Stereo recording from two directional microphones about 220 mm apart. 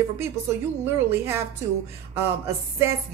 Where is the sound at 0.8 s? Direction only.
10° right (ahead or behind).